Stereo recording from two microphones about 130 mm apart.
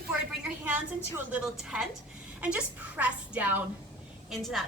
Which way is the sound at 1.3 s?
5° right (ahead or behind).